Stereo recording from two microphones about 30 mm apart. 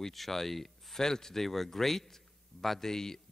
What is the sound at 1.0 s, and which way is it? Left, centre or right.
A man's voice, centre.